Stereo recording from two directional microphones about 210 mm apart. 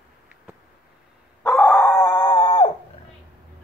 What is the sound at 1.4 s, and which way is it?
Dog, 10° left (ahead or behind).